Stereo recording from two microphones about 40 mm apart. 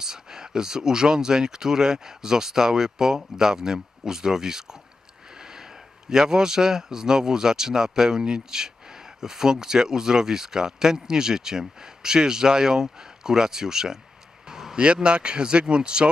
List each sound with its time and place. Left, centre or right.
0.0 s speech: centre
14.5 s a sound: centre
14.8 s speech: right